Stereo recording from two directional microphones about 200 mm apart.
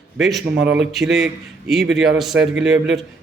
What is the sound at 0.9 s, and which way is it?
Speech, centre (ahead or behind).